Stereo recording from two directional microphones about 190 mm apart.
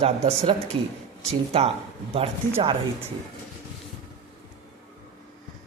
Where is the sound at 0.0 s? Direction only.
35° right (ahead or behind).